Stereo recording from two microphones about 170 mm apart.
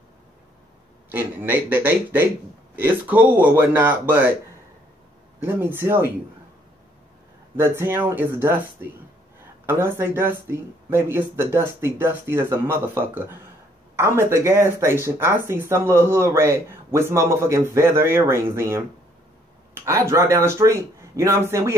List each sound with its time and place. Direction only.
1.1 s speech: 10° right (ahead or behind)
5.4 s speech: 10° right (ahead or behind)
7.5 s speech: 15° right (ahead or behind)